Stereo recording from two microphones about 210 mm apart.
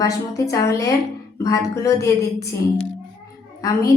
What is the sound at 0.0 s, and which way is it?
A woman's voice, 15° left (ahead or behind).